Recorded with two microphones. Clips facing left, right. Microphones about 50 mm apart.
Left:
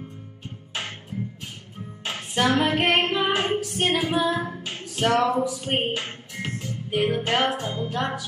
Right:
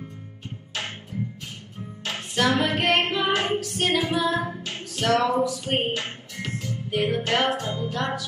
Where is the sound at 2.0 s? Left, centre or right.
Centre.